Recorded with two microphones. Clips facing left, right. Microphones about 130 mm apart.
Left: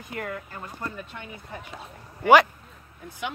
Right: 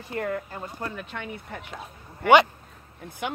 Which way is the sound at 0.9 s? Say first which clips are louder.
Right 4 dB; 75° right (ahead or behind).